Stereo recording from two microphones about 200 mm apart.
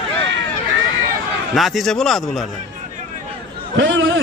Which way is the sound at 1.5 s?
Centre (ahead or behind).